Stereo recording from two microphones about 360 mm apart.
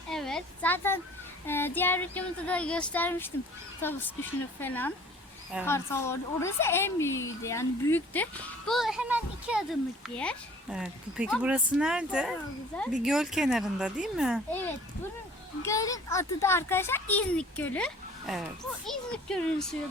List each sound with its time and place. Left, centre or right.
0.1 s a woman's voice: centre
15.6 s a woman's voice: centre